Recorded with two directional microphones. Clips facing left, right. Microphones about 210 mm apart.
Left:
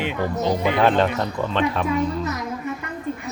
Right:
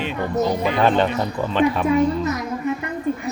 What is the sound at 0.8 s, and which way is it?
A man's voice, centre (ahead or behind).